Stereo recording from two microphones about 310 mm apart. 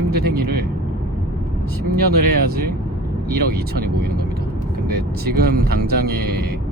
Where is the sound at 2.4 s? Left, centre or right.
Right.